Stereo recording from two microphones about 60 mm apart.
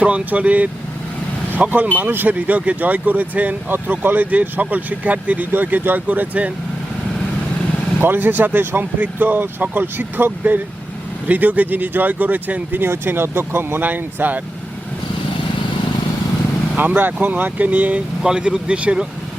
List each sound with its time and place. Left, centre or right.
0.0 s speech: right
8.0 s speech: right
16.7 s speech: right
18.2 s speech: centre